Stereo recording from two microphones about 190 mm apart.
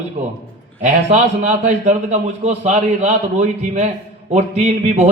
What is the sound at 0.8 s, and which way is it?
A man's voice, 40° right (ahead or behind).